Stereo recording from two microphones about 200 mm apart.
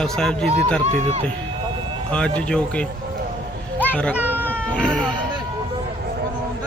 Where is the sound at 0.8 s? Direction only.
30° right (ahead or behind).